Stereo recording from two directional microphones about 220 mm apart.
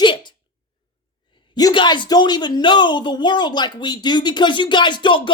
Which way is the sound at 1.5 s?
20° left (ahead or behind).